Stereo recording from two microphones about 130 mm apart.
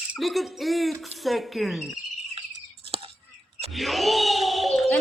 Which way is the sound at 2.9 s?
45° right (ahead or behind).